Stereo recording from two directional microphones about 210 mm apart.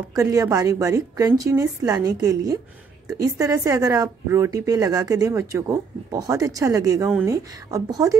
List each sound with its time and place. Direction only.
0.1 s speech: 15° right (ahead or behind)